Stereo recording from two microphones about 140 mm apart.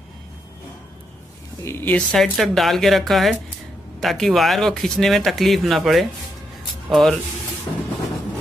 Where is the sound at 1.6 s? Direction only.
15° left (ahead or behind).